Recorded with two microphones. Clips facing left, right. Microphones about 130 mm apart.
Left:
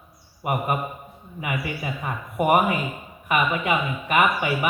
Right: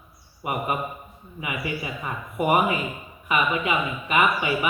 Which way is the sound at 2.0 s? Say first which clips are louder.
Left 3 dB; 45° left (ahead or behind).